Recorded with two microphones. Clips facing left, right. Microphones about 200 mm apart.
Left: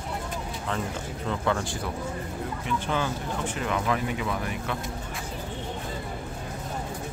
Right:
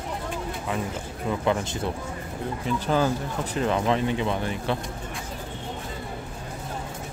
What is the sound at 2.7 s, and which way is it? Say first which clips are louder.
Speech: right 5 dB; 35° right (ahead or behind).